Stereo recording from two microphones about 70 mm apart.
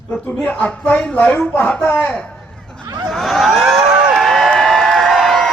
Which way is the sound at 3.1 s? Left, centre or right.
Centre.